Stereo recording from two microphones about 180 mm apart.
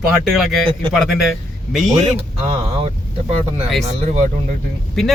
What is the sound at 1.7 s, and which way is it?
Speech, centre (ahead or behind).